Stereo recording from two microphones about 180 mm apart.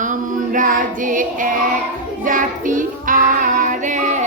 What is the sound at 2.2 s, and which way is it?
Child singing, 50° right (ahead or behind).